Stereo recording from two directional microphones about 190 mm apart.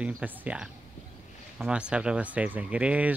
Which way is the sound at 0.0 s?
5° right (ahead or behind).